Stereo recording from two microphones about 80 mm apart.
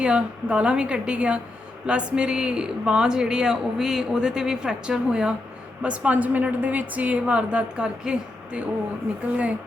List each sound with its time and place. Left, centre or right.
0.0 s speech: centre